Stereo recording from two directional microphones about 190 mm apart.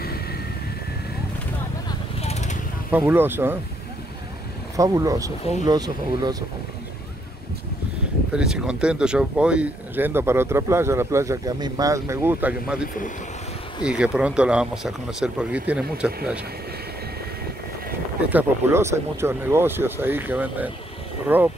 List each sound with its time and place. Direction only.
0.0 s vehicle: 55° left (ahead or behind)
2.2 s vehicle: 35° left (ahead or behind)
2.9 s speech: 10° right (ahead or behind)
4.7 s speech: 15° right (ahead or behind)
8.3 s speech: 5° right (ahead or behind)
13.8 s speech: 5° right (ahead or behind)
18.3 s speech: 15° right (ahead or behind)